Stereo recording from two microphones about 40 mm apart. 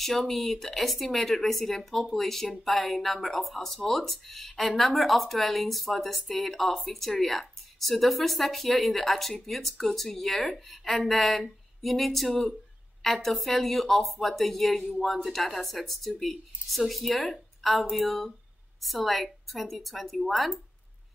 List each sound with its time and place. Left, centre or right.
0.0 s speech: centre